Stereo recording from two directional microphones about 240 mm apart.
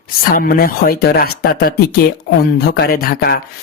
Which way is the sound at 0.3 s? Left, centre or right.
Left.